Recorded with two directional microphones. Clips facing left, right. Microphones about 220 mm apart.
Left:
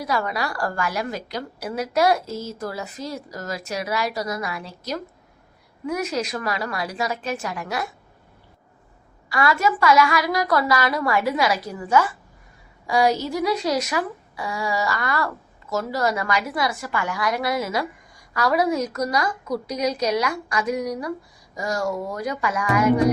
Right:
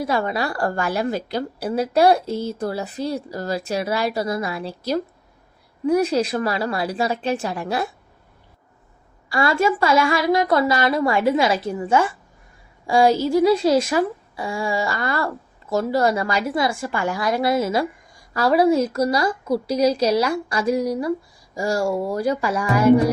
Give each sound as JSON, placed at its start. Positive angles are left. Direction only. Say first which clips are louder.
{"t": 0.0, "sound": "a woman's voice", "louder": "right 3 dB", "side_deg": -25}
{"t": 2.2, "sound": "speech", "louder": "right 6 dB", "side_deg": -60}
{"t": 2.6, "sound": "a woman's voice", "louder": "right 5 dB", "side_deg": -30}
{"t": 9.3, "sound": "a woman's voice", "louder": "right 2 dB", "side_deg": -30}